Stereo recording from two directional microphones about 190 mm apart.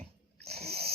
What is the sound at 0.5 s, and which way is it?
Wheeze, 55° right (ahead or behind).